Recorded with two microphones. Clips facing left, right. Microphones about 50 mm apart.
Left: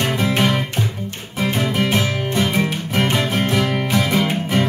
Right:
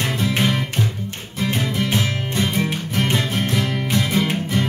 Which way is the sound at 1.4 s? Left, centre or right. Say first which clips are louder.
Left 3 dB; centre.